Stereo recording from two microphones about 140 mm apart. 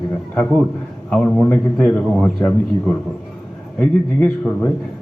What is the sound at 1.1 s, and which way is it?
A man's voice, 5° left (ahead or behind).